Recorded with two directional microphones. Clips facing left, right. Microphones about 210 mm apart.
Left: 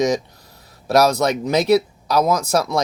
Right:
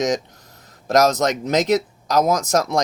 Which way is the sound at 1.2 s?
20° right (ahead or behind).